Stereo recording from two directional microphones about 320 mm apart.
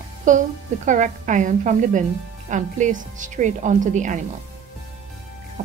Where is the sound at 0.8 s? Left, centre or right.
Right.